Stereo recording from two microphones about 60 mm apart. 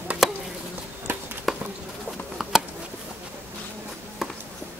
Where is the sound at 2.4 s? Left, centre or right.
Centre.